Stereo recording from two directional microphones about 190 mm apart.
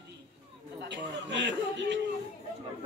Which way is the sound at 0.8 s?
70° right (ahead or behind).